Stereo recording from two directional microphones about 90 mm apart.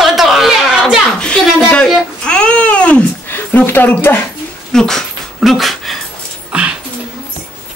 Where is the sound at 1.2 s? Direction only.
10° left (ahead or behind).